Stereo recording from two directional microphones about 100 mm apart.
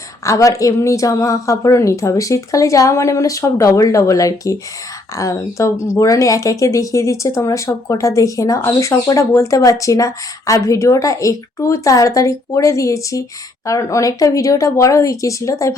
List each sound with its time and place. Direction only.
0.3 s speech: 35° left (ahead or behind)